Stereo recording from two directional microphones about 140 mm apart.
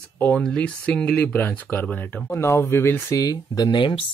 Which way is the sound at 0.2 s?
10° left (ahead or behind).